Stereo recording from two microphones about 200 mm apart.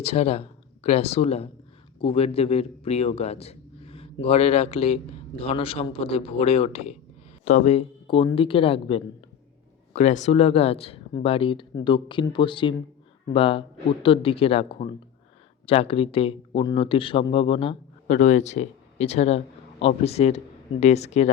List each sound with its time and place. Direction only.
0.0 s speech: 30° left (ahead or behind)